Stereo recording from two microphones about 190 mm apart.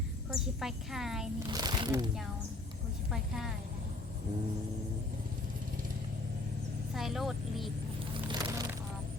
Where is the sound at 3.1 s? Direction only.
Centre (ahead or behind).